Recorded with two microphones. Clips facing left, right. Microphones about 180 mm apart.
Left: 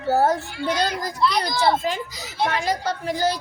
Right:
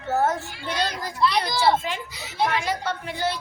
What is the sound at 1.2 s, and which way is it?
Children playing, centre (ahead or behind).